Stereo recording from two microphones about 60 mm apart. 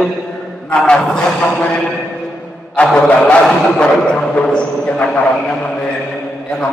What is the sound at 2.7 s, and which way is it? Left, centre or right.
A man's voice, centre.